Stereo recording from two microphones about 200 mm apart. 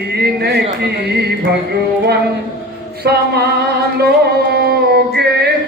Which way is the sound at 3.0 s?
55° right (ahead or behind).